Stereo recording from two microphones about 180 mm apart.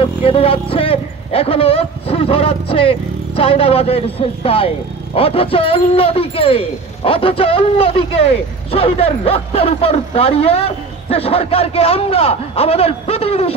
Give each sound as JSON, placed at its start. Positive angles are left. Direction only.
{"t": 0.0, "sound": "speech", "side_deg": 30}